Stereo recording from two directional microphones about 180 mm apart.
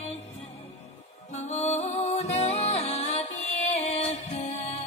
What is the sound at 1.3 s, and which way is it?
Music, 40° left (ahead or behind).